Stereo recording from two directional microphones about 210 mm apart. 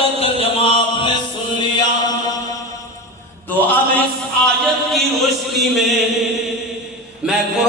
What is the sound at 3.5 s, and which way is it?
Music, 10° left (ahead or behind).